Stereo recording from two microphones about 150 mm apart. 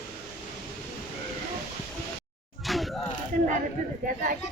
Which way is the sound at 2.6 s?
Centre (ahead or behind).